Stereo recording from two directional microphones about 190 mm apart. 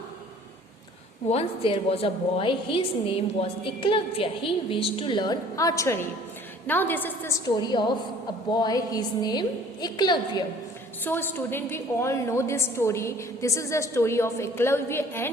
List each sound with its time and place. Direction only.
1.3 s a woman's voice: 30° left (ahead or behind); by 7.3 s 10° left (ahead or behind)
7.4 s a woman's voice: 25° left (ahead or behind)
11.0 s a woman's voice: 10° left (ahead or behind)